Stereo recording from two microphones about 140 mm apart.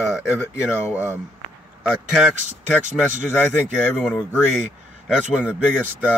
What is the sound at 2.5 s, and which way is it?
Speech, 60° right (ahead or behind).